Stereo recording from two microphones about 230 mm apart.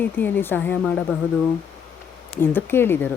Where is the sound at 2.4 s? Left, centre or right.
Centre.